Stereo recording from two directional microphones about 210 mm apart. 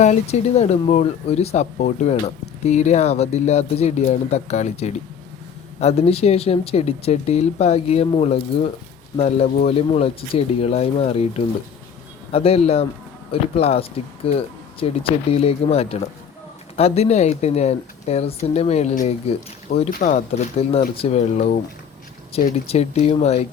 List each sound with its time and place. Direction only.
0.0 s speech: 30° left (ahead or behind)